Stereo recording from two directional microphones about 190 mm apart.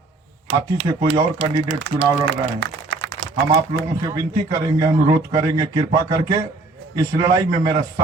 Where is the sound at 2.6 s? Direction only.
90° right.